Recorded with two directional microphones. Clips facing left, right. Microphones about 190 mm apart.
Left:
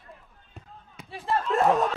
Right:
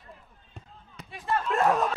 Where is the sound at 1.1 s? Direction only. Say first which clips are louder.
Left 2 dB; 35° left (ahead or behind).